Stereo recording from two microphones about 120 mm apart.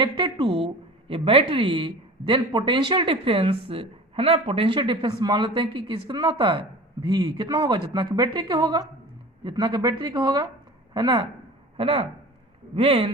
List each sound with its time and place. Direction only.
0.0 s a woman's voice: 40° right (ahead or behind)
7.1 s speech: 35° right (ahead or behind)
11.8 s a woman's voice: 50° right (ahead or behind)